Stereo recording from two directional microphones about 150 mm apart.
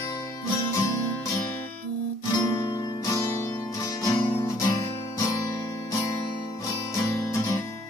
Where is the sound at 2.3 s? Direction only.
25° left (ahead or behind).